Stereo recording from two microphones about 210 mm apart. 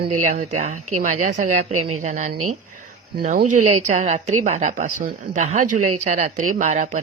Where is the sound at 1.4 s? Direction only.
90° right.